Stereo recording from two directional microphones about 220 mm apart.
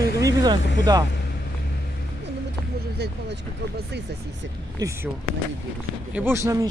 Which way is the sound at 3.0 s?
45° right (ahead or behind).